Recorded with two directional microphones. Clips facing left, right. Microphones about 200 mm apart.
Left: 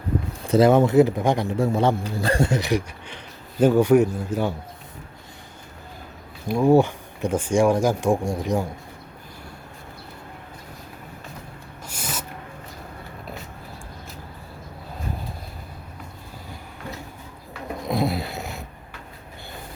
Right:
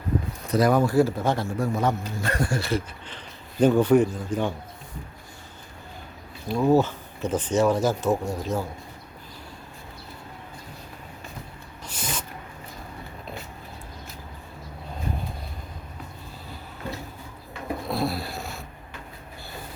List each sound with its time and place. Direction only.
0.4 s a man's voice: 25° left (ahead or behind); by 4.5 s 10° left (ahead or behind)
6.5 s a man's voice: 10° left (ahead or behind)
11.9 s a sound: 10° left (ahead or behind)
17.8 s snoring: 20° left (ahead or behind)